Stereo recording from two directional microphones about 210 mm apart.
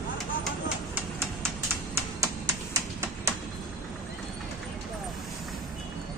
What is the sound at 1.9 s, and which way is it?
Music, 15° right (ahead or behind).